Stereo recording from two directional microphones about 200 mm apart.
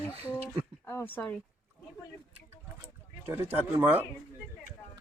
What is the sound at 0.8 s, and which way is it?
Speech, 10° left (ahead or behind).